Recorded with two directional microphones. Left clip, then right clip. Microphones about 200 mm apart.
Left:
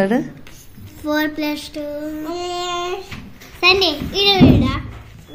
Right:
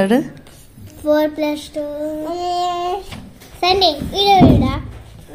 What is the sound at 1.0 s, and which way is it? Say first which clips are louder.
Speech: right 4 dB; 25° right (ahead or behind).